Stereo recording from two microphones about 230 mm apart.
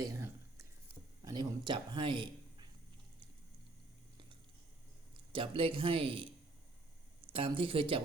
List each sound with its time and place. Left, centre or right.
0.0 s a sound: centre
5.3 s speech: right
7.3 s speech: right